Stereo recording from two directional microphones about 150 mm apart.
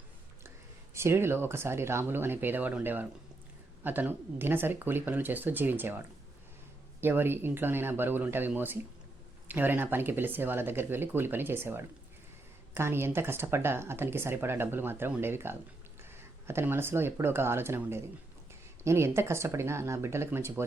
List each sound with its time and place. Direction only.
0.9 s speech: 15° right (ahead or behind)